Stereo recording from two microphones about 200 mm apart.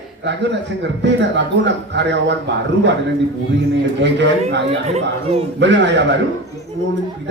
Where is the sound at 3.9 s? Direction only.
60° right (ahead or behind).